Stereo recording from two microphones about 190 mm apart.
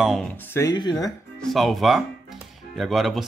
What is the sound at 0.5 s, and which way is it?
Speech, 20° left (ahead or behind).